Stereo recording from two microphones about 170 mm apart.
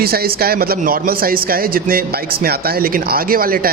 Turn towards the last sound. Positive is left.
turn(degrees=-60)  # may be behind; listen again after turning